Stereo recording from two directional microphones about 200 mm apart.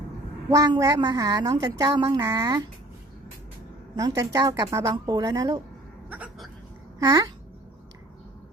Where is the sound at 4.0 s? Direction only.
20° right (ahead or behind).